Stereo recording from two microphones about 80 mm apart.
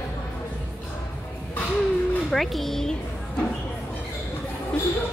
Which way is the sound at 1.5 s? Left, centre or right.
Centre.